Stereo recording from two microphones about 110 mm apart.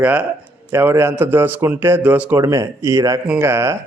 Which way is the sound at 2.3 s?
25° right (ahead or behind).